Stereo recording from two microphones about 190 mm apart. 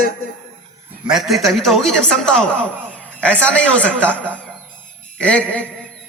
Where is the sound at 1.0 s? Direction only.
Centre (ahead or behind).